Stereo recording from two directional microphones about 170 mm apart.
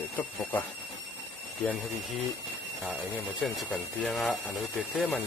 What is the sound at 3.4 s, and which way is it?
Speech, centre (ahead or behind).